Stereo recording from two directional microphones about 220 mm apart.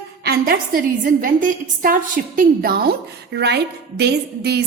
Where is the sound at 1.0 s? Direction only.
35° right (ahead or behind).